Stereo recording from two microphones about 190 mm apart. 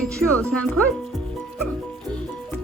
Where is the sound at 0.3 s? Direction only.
5° left (ahead or behind).